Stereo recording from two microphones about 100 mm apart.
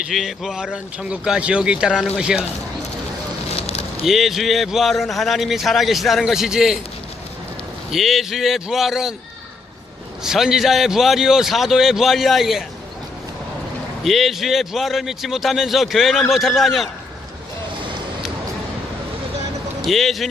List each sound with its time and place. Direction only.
0.1 s speech: centre (ahead or behind)
4.0 s a man's voice: centre (ahead or behind)
7.9 s a man's voice: centre (ahead or behind)
10.2 s a man's voice: 5° right (ahead or behind)
14.0 s a man's voice: centre (ahead or behind)
19.8 s a man's voice: centre (ahead or behind)